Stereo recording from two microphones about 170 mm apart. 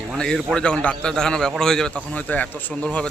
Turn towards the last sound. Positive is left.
turn(degrees=5)  # may be behind; listen again after turning